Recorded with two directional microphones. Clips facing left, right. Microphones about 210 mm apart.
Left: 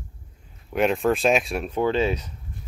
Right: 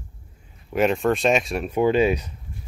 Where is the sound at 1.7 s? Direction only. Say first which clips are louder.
Right 4 dB; 15° right (ahead or behind).